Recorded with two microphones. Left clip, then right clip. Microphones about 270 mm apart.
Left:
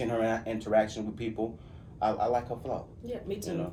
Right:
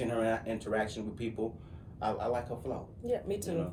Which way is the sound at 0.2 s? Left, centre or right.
Centre.